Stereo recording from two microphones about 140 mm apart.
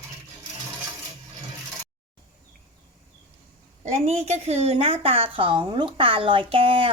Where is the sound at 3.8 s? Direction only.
50° right (ahead or behind).